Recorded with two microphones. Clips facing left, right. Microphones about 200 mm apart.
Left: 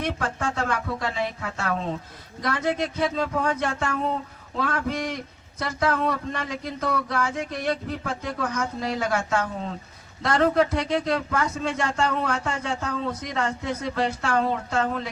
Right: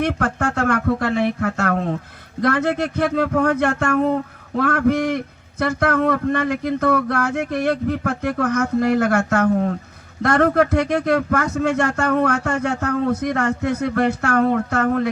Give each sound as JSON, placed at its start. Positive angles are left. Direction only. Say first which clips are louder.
{"t": 0.0, "sound": "speech", "louder": "right 7 dB", "side_deg": -55}